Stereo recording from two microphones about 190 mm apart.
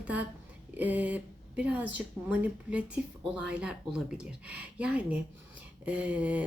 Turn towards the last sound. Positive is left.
turn(degrees=-5)  # may be behind; listen again after turning